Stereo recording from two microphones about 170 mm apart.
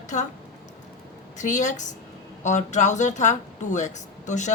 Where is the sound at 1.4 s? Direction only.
45° left (ahead or behind).